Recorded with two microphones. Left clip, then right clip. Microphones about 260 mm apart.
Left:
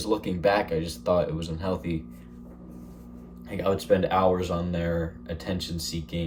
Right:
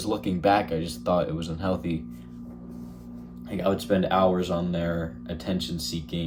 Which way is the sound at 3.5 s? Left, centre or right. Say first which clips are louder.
Left 1 dB; centre.